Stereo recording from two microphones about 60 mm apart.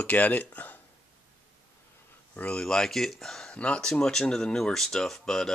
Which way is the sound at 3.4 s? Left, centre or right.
Centre.